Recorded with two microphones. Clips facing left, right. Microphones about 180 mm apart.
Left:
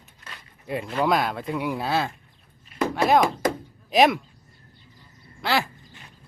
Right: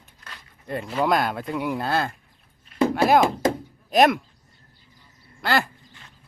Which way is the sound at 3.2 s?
25° right (ahead or behind).